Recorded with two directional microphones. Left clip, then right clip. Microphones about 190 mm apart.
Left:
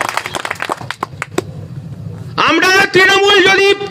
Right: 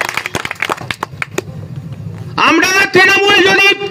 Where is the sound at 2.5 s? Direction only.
50° right (ahead or behind).